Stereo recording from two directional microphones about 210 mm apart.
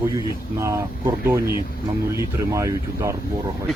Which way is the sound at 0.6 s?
15° right (ahead or behind).